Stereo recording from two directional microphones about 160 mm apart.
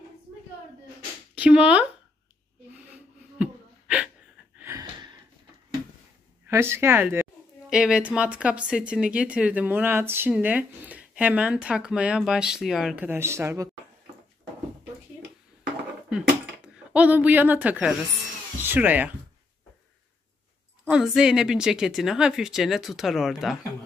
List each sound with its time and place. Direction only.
1.3 s speech: 10° right (ahead or behind)
3.3 s a sound: 5° right (ahead or behind)
4.6 s gasp: 15° right (ahead or behind)
6.4 s speech: 15° right (ahead or behind)
16.1 s dishes: 5° right (ahead or behind)
18.6 s speech: 10° right (ahead or behind)
20.8 s a woman's voice: 5° right (ahead or behind)